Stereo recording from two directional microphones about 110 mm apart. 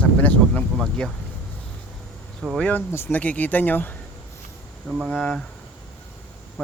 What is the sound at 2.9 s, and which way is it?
Speech, 20° left (ahead or behind).